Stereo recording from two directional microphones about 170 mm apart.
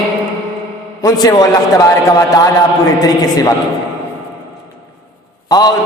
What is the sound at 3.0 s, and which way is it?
Speech, 20° left (ahead or behind).